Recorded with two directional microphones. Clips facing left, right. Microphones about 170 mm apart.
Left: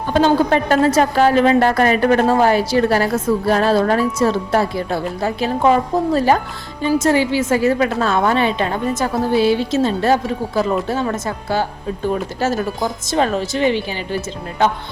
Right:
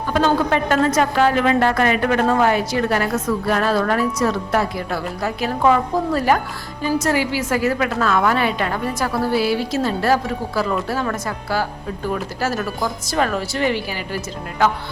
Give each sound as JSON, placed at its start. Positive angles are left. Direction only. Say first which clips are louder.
{"t": 0.1, "sound": "a woman's voice", "louder": "left 4 dB", "side_deg": 30}